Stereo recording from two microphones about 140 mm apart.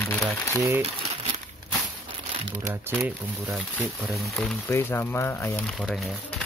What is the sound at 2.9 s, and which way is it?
Speech, 10° right (ahead or behind).